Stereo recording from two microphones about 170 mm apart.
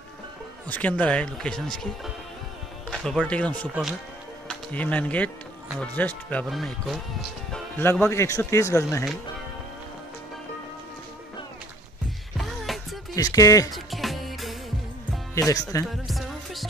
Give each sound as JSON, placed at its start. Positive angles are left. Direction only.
{"t": 0.7, "sound": "a man's voice", "side_deg": 10}
{"t": 2.9, "sound": "a man's voice", "side_deg": 0}
{"t": 7.8, "sound": "a man's voice", "side_deg": 15}
{"t": 12.4, "sound": "music", "side_deg": 0}
{"t": 13.1, "sound": "speech", "side_deg": 20}
{"t": 13.7, "sound": "music", "side_deg": 0}
{"t": 15.3, "sound": "speech", "side_deg": 20}
{"t": 16.1, "sound": "music", "side_deg": 0}